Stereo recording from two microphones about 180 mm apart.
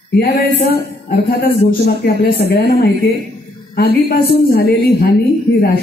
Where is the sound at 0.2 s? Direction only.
60° left (ahead or behind).